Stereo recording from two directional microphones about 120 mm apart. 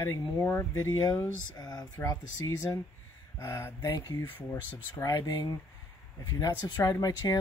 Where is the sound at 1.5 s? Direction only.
35° left (ahead or behind).